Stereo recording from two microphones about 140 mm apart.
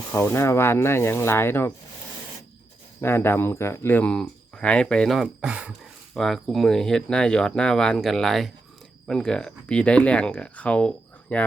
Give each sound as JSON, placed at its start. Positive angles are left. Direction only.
{"t": 0.1, "sound": "speech", "side_deg": 20}
{"t": 3.0, "sound": "speech", "side_deg": 15}